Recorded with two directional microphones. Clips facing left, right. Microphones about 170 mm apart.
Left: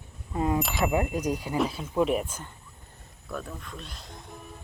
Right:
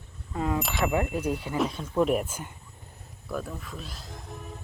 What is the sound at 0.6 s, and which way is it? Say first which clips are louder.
Speech: left 1 dB; centre (ahead or behind).